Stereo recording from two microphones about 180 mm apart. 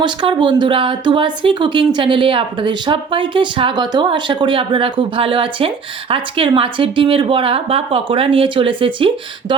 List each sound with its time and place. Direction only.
0.0 s speech: 25° right (ahead or behind)